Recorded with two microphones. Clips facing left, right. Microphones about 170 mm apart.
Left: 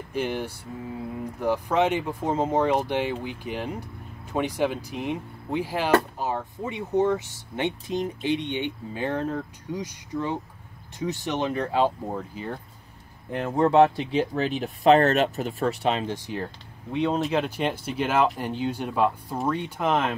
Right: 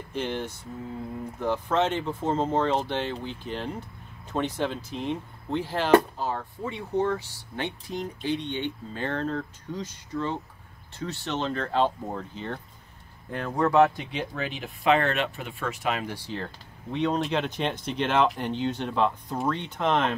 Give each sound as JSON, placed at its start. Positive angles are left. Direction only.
{"t": 0.1, "sound": "speech", "side_deg": 10}
{"t": 13.3, "sound": "speech", "side_deg": 20}